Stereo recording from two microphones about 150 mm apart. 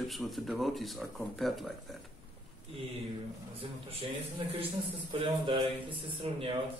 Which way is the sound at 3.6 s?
40° right (ahead or behind).